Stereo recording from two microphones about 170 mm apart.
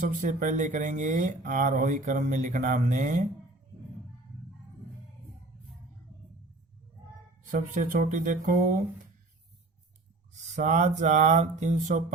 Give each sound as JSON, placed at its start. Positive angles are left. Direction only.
{"t": 0.3, "sound": "speech", "side_deg": -50}
{"t": 7.4, "sound": "speech", "side_deg": -50}
{"t": 10.3, "sound": "speech", "side_deg": -45}